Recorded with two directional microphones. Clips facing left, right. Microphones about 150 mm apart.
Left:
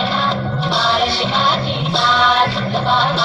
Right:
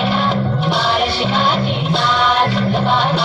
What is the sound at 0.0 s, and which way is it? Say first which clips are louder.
Music: right 2 dB; 10° right (ahead or behind).